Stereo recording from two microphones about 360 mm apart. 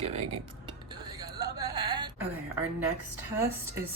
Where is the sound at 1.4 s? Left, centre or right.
Centre.